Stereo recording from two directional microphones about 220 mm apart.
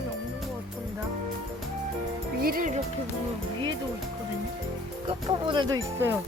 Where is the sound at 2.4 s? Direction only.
40° right (ahead or behind).